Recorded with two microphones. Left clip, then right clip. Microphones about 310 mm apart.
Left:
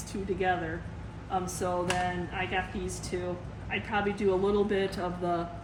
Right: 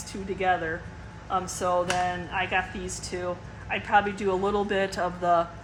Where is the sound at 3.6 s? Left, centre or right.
Centre.